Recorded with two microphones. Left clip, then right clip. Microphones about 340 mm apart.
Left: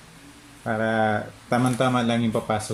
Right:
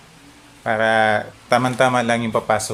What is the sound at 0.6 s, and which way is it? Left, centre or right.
Speech, right.